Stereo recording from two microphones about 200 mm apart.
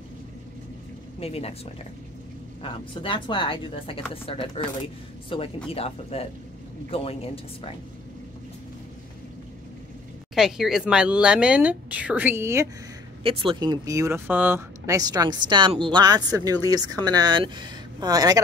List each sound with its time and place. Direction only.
1.2 s speech: 30° left (ahead or behind)
2.6 s speech: 25° left (ahead or behind)
10.3 s speech: centre (ahead or behind)
13.2 s speech: 25° right (ahead or behind)